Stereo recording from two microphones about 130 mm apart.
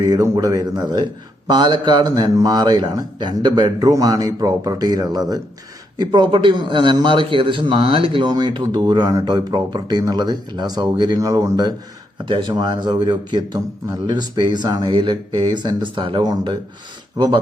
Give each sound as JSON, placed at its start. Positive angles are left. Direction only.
{"t": 0.0, "sound": "a man's voice", "side_deg": -30}